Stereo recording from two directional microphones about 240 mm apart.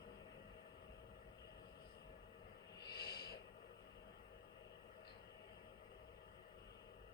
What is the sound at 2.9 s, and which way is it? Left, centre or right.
Snort, left.